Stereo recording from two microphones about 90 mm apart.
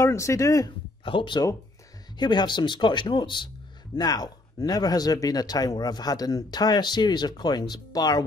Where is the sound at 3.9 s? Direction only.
50° left (ahead or behind).